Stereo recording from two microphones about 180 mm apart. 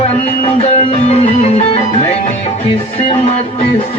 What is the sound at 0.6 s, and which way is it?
Music, 35° left (ahead or behind).